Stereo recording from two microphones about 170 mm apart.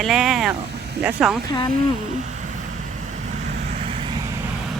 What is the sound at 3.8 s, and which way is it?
Vehicle, 35° right (ahead or behind).